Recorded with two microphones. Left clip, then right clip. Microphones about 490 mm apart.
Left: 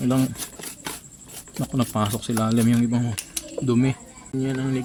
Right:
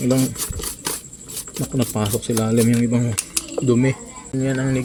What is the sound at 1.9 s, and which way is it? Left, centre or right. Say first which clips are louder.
Speech: right 3 dB; left.